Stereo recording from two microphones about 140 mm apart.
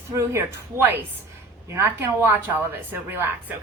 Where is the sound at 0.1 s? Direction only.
20° right (ahead or behind).